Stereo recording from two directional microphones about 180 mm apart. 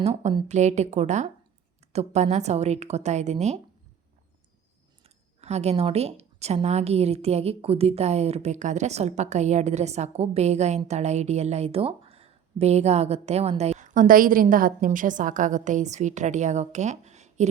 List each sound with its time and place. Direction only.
0.0 s speech: 35° right (ahead or behind)
5.0 s speech: 35° right (ahead or behind)